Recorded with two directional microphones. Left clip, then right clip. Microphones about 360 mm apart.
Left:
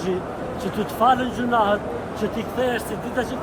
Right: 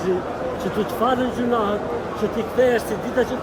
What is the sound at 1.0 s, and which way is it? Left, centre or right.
Speech, centre.